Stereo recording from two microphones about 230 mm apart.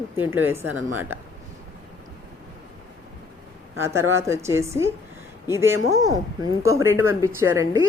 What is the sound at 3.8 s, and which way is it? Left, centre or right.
Speech, centre.